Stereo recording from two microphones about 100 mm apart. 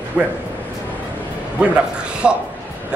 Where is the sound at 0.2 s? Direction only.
20° right (ahead or behind).